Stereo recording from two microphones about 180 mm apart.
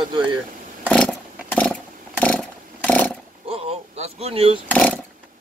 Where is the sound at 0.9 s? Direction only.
5° left (ahead or behind).